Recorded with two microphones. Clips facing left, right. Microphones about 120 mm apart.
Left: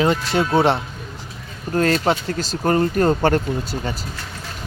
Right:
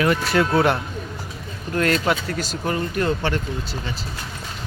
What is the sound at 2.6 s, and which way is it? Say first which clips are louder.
Speech: left 7 dB; 45° left (ahead or behind).